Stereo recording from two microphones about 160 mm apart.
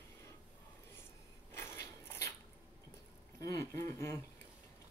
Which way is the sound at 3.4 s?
20° left (ahead or behind).